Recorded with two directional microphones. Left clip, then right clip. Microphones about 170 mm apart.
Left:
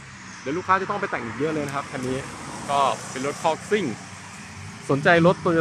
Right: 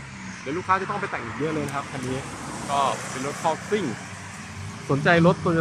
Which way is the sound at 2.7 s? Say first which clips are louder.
Left 2 dB; centre (ahead or behind).